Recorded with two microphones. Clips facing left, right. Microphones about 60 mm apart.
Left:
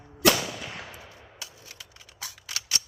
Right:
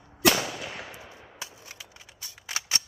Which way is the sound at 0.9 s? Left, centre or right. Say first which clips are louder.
Right 1 dB; right.